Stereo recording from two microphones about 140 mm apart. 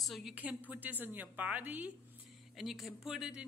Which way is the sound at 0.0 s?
Centre (ahead or behind).